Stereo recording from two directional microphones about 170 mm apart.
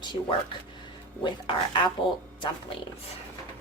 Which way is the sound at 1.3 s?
30° left (ahead or behind).